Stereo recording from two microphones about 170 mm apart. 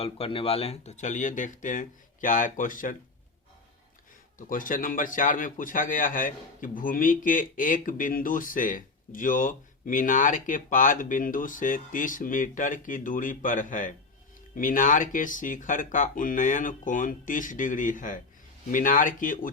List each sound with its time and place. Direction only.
0.0 s a man's voice: 35° left (ahead or behind); by 2.9 s 50° left (ahead or behind)
4.4 s a man's voice: 55° left (ahead or behind)